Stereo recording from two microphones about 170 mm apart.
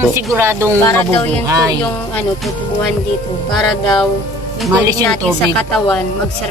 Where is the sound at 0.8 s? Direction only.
15° left (ahead or behind).